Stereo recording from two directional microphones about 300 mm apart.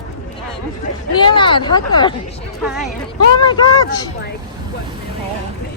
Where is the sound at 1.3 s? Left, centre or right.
Centre.